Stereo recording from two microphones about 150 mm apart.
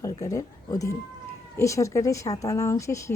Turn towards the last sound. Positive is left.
turn(degrees=20)  # may be behind; listen again after turning